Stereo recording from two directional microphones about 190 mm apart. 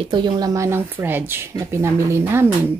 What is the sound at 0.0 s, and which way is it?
A woman's voice, 25° right (ahead or behind).